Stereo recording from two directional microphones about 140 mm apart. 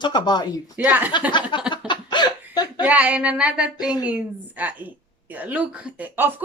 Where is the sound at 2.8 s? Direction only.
10° right (ahead or behind).